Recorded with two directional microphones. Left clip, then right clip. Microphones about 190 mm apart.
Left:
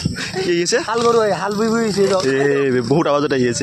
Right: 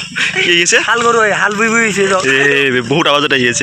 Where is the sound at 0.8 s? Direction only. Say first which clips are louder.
Right 5 dB; 40° right (ahead or behind).